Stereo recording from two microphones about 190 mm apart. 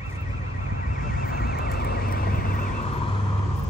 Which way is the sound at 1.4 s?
55° left (ahead or behind).